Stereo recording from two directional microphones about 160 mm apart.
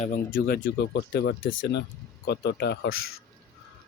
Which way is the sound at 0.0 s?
60° left (ahead or behind).